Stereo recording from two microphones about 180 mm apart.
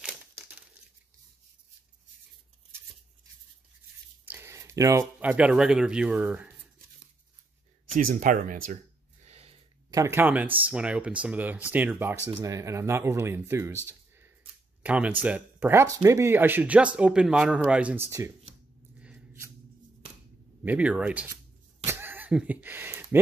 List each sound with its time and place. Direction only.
4.3 s speech: 15° right (ahead or behind)
7.9 s speech: 45° right (ahead or behind)
9.2 s a sound: 35° right (ahead or behind)
9.8 s speech: 15° right (ahead or behind)
14.8 s speech: 5° right (ahead or behind)
18.9 s a sound: 10° right (ahead or behind)
20.6 s speech: 5° right (ahead or behind)
21.8 s goat: 10° right (ahead or behind)